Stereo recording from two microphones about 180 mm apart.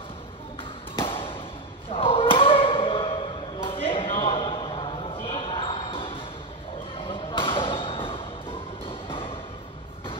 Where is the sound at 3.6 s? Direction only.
30° left (ahead or behind).